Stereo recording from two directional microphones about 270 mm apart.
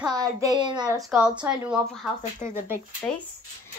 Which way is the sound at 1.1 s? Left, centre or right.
Centre.